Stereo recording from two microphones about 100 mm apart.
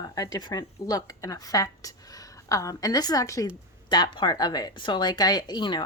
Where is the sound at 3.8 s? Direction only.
50° left (ahead or behind).